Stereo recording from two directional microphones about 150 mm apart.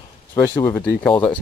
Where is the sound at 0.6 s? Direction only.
10° left (ahead or behind).